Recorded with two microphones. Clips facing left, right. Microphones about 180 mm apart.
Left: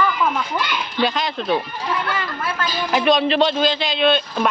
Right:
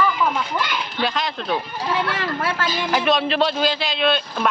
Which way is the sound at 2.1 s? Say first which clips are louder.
Right 1 dB; 75° right (ahead or behind).